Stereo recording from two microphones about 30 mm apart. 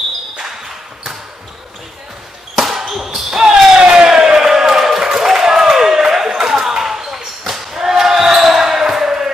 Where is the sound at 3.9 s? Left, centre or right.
Right.